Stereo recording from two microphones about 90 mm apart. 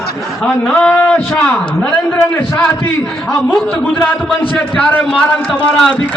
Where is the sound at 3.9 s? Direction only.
20° left (ahead or behind).